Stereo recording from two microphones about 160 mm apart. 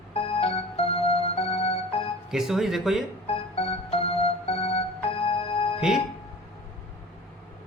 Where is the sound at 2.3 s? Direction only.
Centre (ahead or behind).